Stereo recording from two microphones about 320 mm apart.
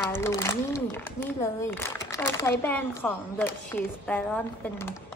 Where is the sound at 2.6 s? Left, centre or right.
Centre.